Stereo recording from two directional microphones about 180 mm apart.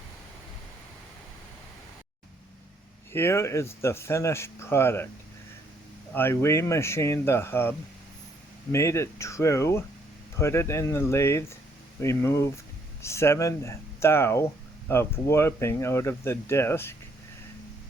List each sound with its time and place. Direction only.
3.1 s speech: 15° left (ahead or behind)
6.1 s speech: 15° left (ahead or behind)